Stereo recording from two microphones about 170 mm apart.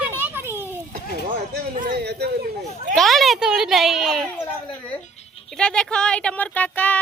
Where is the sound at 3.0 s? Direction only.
Centre (ahead or behind).